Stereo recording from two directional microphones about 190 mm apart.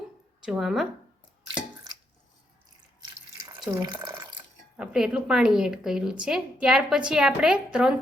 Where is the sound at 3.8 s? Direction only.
20° right (ahead or behind).